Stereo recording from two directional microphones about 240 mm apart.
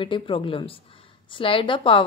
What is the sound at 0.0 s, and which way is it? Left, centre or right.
Speech, left.